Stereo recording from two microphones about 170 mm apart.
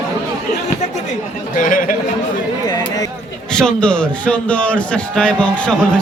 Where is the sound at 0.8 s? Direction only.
45° left (ahead or behind).